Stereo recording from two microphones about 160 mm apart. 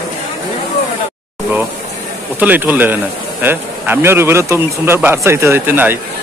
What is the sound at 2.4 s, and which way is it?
Speech, 10° right (ahead or behind).